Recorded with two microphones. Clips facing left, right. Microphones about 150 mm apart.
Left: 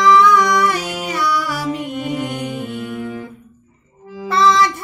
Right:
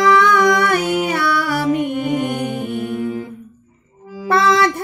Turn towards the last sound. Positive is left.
turn(degrees=-55)  # may be behind; listen again after turning